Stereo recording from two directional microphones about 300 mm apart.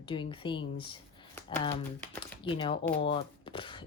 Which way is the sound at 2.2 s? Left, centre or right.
Centre.